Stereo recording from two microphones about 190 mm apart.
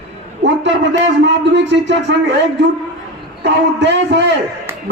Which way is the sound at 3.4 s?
65° right (ahead or behind).